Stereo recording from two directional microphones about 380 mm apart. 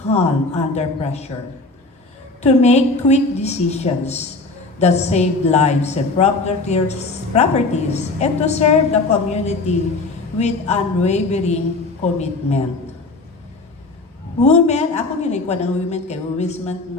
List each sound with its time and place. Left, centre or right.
0.1 s a woman's voice: centre
2.4 s a woman's voice: centre
14.4 s a woman's voice: centre